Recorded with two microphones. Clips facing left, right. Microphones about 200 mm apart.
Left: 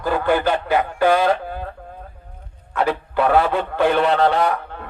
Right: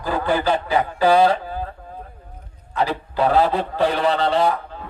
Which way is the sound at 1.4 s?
60° left (ahead or behind).